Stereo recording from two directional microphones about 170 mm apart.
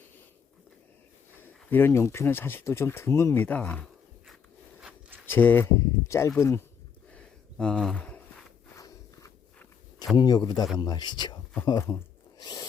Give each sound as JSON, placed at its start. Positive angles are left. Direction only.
{"t": 1.4, "sound": "speech", "side_deg": 10}
{"t": 4.8, "sound": "zipper", "side_deg": -5}
{"t": 5.2, "sound": "speech", "side_deg": 10}
{"t": 7.1, "sound": "a sound", "side_deg": 5}
{"t": 8.7, "sound": "walk", "side_deg": 20}
{"t": 10.2, "sound": "speech", "side_deg": 25}
{"t": 12.4, "sound": "a sound", "side_deg": 25}